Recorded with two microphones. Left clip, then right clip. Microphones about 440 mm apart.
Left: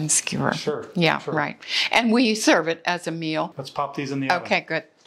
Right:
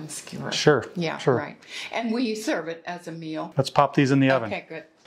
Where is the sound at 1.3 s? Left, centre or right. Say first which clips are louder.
Left 8 dB; left.